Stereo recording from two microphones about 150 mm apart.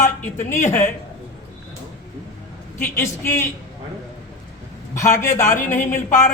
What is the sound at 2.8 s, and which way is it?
Speech, 15° left (ahead or behind).